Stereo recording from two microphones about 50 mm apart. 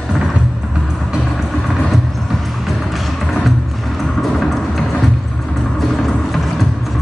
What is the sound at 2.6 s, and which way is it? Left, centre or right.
Music, centre.